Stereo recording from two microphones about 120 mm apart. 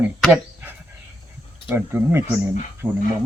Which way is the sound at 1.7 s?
20° right (ahead or behind).